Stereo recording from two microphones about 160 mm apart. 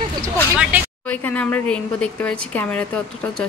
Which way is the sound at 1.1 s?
10° left (ahead or behind).